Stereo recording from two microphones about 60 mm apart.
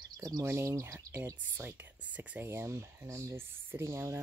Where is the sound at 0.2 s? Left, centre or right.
Right.